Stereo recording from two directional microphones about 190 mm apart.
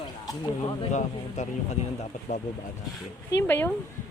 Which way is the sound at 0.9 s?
40° left (ahead or behind).